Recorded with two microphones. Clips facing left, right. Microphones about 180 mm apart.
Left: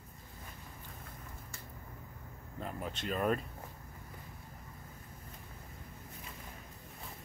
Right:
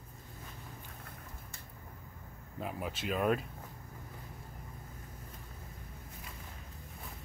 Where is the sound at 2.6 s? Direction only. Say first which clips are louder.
Right 2 dB; 10° right (ahead or behind).